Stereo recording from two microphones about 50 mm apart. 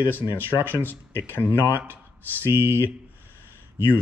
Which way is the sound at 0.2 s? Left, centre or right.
Right.